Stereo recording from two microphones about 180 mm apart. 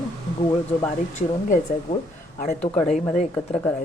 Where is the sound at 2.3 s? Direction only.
40° left (ahead or behind).